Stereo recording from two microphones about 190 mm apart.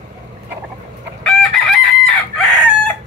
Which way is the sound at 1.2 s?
Centre (ahead or behind).